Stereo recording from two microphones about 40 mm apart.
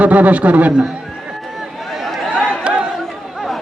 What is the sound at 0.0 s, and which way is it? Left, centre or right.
Speech, right.